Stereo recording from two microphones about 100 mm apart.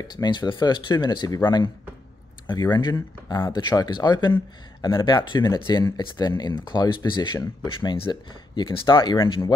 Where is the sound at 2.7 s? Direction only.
45° left (ahead or behind).